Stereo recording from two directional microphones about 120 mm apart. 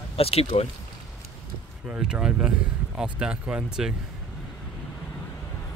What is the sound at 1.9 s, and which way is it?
Speech, 5° right (ahead or behind).